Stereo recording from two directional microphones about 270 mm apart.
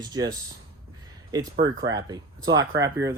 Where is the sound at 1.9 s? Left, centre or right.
Centre.